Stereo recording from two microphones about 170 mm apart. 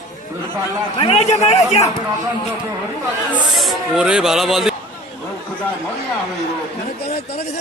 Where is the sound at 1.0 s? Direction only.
40° left (ahead or behind).